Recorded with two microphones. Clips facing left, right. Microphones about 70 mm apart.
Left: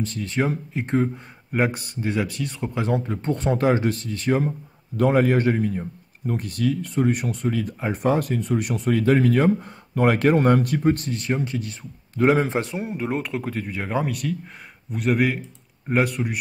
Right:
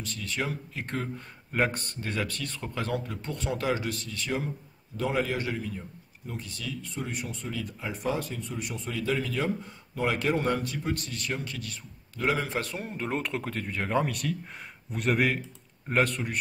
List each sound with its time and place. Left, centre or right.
0.0 s speech: left
0.8 s speech: centre
3.1 s a man's voice: left; by 16.3 s centre